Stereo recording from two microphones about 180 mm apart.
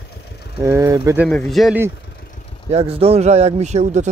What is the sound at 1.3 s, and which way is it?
Speech, centre (ahead or behind).